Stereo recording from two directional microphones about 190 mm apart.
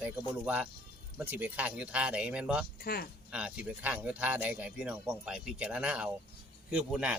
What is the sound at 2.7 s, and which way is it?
Speech, 55° left (ahead or behind).